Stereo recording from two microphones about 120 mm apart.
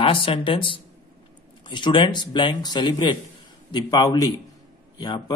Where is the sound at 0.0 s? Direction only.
50° left (ahead or behind).